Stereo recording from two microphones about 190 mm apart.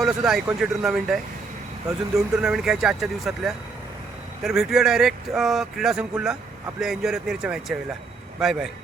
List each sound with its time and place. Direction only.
0.0 s speech: centre (ahead or behind)